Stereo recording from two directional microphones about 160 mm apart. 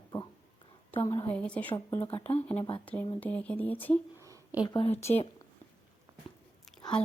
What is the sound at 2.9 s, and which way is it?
Speech, 10° left (ahead or behind).